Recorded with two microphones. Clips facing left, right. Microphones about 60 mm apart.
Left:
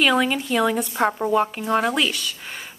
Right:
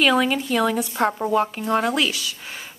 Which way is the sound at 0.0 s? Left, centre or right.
Centre.